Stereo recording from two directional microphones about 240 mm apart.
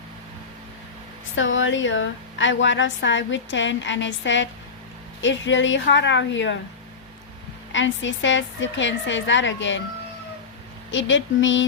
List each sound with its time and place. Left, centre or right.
1.4 s a woman's voice: left
7.7 s a woman's voice: left
10.9 s a woman's voice: left